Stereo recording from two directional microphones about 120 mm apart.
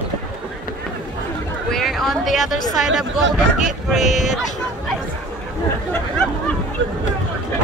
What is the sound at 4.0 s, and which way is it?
Speech, 80° left.